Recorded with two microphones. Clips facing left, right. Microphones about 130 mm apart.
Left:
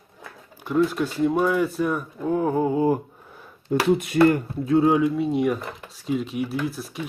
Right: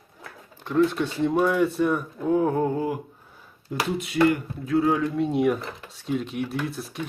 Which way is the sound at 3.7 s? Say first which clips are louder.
Left 7 dB; 50° left (ahead or behind).